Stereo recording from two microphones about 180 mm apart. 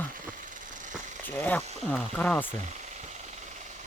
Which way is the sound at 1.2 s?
10° left (ahead or behind).